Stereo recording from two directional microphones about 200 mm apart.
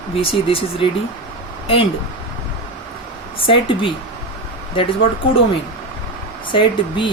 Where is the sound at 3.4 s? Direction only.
25° left (ahead or behind).